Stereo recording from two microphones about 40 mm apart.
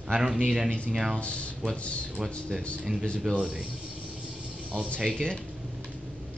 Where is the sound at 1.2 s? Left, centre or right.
Left.